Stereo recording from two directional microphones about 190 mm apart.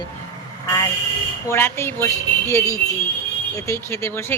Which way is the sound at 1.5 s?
15° left (ahead or behind).